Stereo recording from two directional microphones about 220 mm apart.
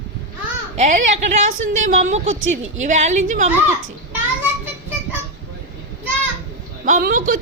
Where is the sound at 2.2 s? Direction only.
60° right (ahead or behind).